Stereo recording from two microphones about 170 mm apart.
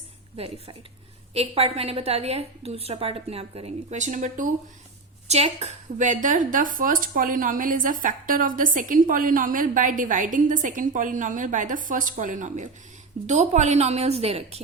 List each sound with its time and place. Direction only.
0.3 s a woman's voice: 35° right (ahead or behind)